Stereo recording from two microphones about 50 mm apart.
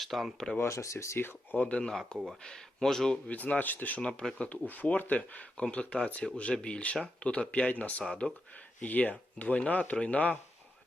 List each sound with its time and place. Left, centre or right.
0.0 s speech: centre
0.6 s speech: left
1.2 s speech: left
1.5 s speech: left
2.1 s speech: centre
2.4 s speech: centre
3.2 s speech: left